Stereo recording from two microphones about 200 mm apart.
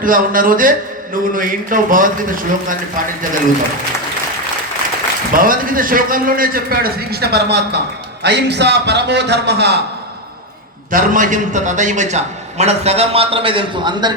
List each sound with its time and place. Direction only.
0.0 s a man's voice: 45° right (ahead or behind)
5.3 s a man's voice: 45° right (ahead or behind)
10.9 s a man's voice: 40° right (ahead or behind); by 14.1 s 25° right (ahead or behind)